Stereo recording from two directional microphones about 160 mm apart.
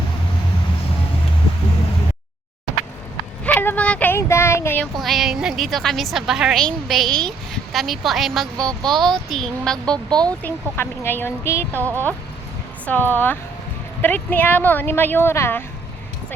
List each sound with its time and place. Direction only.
3.4 s speech: 10° left (ahead or behind)
4.9 s a woman's voice: centre (ahead or behind); by 11.8 s 15° left (ahead or behind)
11.8 s speech: 15° right (ahead or behind)
12.8 s speech: 10° left (ahead or behind)